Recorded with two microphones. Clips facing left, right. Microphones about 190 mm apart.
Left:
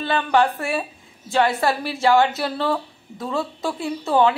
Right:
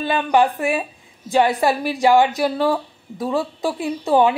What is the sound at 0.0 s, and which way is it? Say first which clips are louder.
A woman's voice: right 2 dB; 15° right (ahead or behind).